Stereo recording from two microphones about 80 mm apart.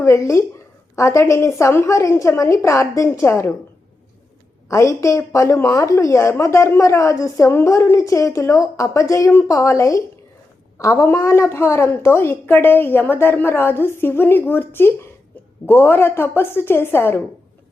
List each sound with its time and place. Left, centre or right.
0.0 s a woman's voice: left
4.7 s a woman's voice: left